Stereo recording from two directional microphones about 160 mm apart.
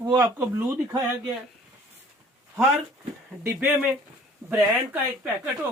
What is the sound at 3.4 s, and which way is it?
Speech, 10° right (ahead or behind).